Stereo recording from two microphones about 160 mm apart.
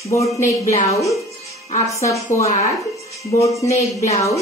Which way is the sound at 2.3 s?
15° left (ahead or behind).